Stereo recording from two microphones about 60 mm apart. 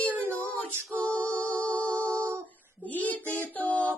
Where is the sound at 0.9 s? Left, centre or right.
Left.